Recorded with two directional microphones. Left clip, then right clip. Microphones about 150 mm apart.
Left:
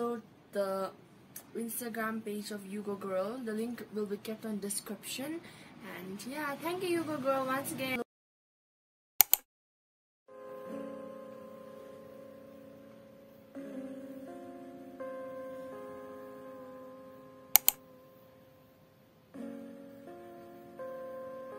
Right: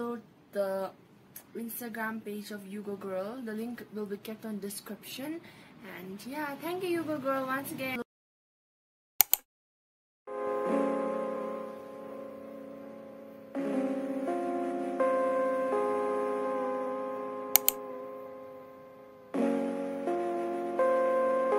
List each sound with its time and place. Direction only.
0.0 s a sound: 10° right (ahead or behind)
1.9 s a woman's voice: 10° right (ahead or behind)
9.2 s a sound: centre (ahead or behind)
10.3 s music: 45° right (ahead or behind)
13.5 s music: 45° right (ahead or behind); by 17.5 s 60° right (ahead or behind)
17.5 s typing: centre (ahead or behind)
19.3 s music: 65° right (ahead or behind)